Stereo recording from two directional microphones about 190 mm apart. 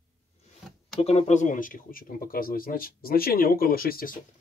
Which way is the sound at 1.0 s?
35° left (ahead or behind).